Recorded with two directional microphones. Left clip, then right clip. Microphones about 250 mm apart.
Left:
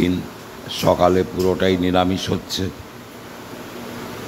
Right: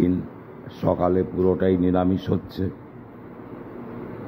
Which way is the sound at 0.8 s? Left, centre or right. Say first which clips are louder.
Left 6 dB; left.